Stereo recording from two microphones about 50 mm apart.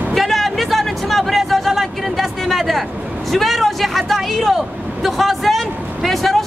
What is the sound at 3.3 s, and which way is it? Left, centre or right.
Vehicle, centre.